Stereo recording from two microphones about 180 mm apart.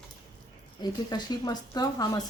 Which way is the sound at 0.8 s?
20° left (ahead or behind).